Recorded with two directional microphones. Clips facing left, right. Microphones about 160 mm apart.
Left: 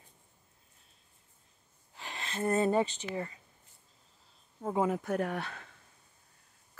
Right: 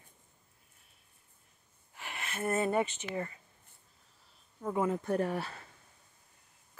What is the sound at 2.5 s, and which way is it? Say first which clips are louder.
Speech: left 2 dB; 30° left (ahead or behind).